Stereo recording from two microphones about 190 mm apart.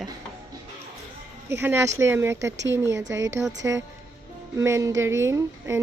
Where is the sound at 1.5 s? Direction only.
15° right (ahead or behind).